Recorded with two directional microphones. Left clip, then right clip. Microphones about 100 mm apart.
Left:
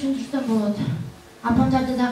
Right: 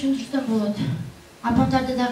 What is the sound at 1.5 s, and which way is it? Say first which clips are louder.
Speech: even; 20° right (ahead or behind).